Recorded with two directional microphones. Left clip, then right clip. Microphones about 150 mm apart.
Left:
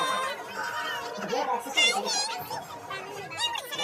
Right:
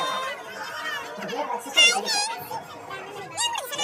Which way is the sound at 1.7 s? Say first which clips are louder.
Right 7 dB; 35° right (ahead or behind).